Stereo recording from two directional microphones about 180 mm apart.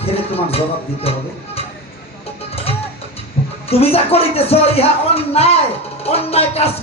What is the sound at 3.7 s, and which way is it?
Speech, 35° left (ahead or behind).